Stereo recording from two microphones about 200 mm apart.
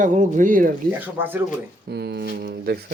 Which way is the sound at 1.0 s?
10° right (ahead or behind).